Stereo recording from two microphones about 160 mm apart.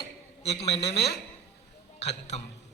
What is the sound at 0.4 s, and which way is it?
Speech, 40° left (ahead or behind).